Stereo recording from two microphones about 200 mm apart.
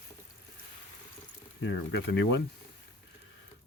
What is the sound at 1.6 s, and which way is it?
Speech, 65° left (ahead or behind).